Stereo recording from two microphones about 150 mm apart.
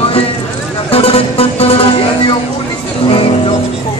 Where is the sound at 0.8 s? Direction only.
40° left (ahead or behind).